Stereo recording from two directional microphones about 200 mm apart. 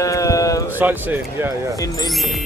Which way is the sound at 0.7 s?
10° right (ahead or behind).